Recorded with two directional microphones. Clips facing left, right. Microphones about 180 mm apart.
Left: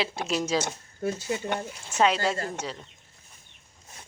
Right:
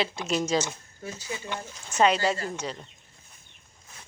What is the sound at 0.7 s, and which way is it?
Speech, 55° left (ahead or behind).